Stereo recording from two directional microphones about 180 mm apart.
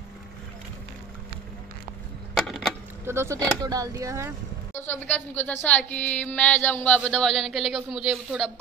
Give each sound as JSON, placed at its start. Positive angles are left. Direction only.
{"t": 3.1, "sound": "speech", "side_deg": -15}
{"t": 4.7, "sound": "a woman's voice", "side_deg": 10}